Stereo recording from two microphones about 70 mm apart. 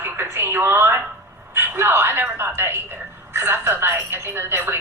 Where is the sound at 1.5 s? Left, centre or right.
Right.